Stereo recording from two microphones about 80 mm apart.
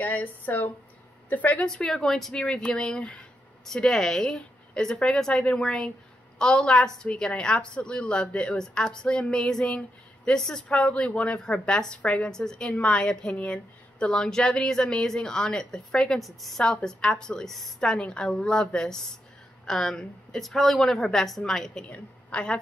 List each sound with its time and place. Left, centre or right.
0.0 s speech: left
1.7 s a woman's voice: centre
21.8 s a woman's voice: centre